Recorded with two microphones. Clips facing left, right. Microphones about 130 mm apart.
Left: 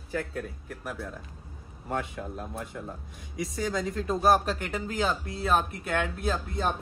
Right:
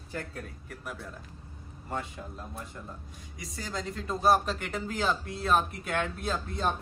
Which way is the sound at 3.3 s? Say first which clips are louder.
Left 8 dB; centre (ahead or behind).